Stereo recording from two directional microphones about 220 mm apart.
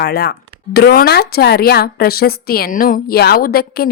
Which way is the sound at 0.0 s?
45° left (ahead or behind).